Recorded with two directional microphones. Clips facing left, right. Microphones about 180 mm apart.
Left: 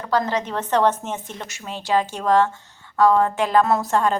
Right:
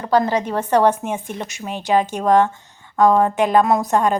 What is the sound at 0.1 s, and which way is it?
A woman's voice, 10° right (ahead or behind).